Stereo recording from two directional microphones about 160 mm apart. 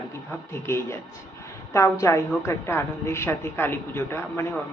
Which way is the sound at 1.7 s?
20° left (ahead or behind).